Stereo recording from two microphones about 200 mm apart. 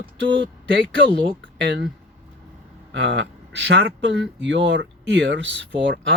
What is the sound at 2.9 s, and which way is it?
Speech, 65° right (ahead or behind).